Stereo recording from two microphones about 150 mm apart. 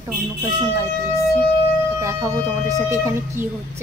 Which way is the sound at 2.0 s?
20° right (ahead or behind).